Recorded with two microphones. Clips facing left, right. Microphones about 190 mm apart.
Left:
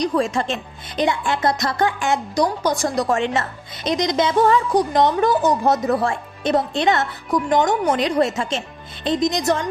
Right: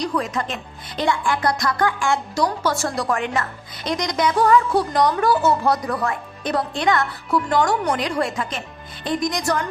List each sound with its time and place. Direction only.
0.0 s a woman's voice: 25° left (ahead or behind)